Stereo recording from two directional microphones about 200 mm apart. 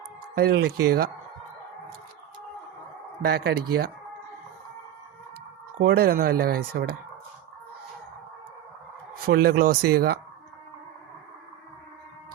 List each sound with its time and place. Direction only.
0.3 s speech: 50° right (ahead or behind)
3.2 s speech: 50° right (ahead or behind)
5.8 s speech: 55° right (ahead or behind)
9.2 s speech: 50° right (ahead or behind)